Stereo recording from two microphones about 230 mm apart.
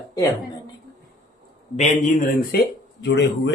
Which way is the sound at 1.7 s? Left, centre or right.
Left.